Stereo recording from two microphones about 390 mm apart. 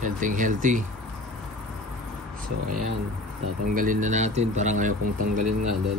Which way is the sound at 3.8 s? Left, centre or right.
Centre.